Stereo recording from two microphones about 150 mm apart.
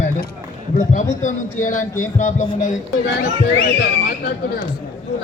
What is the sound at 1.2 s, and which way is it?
Speech, 60° left (ahead or behind).